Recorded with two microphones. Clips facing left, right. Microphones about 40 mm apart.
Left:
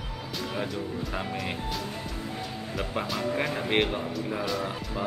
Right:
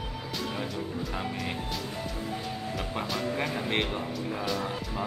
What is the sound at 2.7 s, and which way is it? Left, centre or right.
Speech, centre.